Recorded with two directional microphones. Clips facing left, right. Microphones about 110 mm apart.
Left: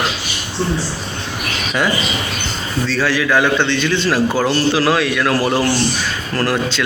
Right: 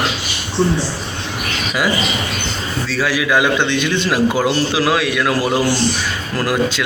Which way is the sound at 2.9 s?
10° right (ahead or behind).